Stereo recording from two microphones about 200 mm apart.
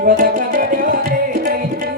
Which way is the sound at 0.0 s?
45° right (ahead or behind).